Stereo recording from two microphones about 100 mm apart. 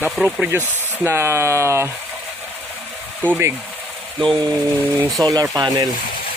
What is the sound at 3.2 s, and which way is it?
Speech, 20° right (ahead or behind).